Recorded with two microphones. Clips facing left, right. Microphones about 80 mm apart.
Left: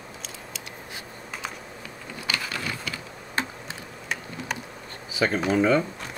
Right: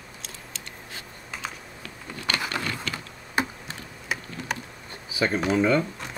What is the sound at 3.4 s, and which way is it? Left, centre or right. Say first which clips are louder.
Tick: right 3 dB; centre.